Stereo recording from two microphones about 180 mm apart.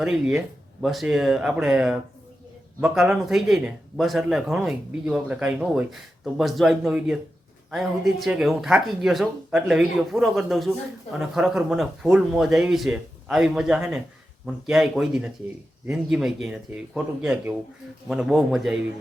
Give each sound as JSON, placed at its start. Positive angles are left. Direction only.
{"t": 0.0, "sound": "speech", "side_deg": -5}